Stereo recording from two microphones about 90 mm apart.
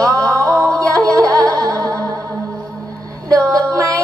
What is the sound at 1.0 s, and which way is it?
Music, 40° right (ahead or behind).